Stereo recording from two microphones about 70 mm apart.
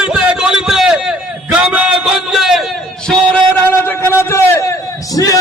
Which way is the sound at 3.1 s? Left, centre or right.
Centre.